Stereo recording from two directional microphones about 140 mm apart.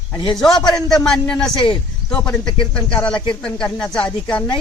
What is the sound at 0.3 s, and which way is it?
A man's voice, 5° left (ahead or behind).